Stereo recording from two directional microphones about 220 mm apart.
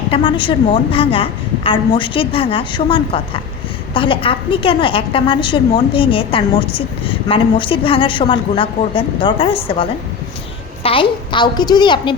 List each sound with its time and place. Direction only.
0.1 s a woman's voice: 20° left (ahead or behind)